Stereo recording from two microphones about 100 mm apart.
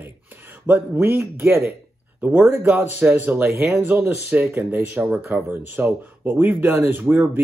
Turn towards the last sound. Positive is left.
turn(degrees=-20)  # may be behind; listen again after turning